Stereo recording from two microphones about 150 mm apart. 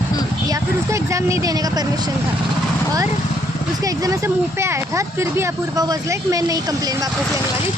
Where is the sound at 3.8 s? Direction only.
20° right (ahead or behind).